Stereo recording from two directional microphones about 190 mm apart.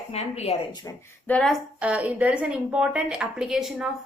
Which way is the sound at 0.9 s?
15° left (ahead or behind).